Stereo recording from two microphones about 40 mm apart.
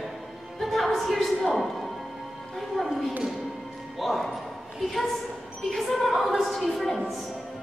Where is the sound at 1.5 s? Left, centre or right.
Centre.